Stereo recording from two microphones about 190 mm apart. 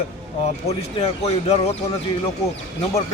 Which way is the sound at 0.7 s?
30° left (ahead or behind).